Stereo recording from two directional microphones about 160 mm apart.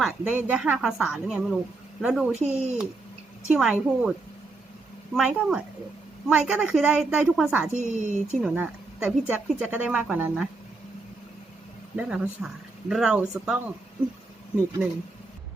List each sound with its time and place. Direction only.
0.0 s a woman's voice: 10° right (ahead or behind)
5.1 s a woman's voice: 5° right (ahead or behind)
7.7 s a woman's voice: 50° right (ahead or behind)
8.4 s a woman's voice: 5° right (ahead or behind)
11.9 s a woman's voice: 5° right (ahead or behind)